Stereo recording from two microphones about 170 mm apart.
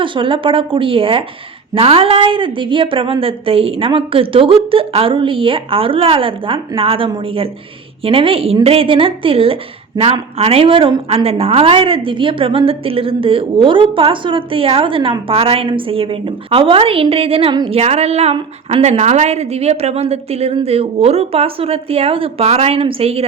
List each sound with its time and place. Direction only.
0.0 s a woman's voice: 30° right (ahead or behind)